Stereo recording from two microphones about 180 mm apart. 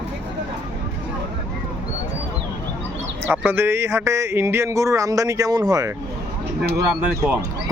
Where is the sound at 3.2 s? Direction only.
10° right (ahead or behind).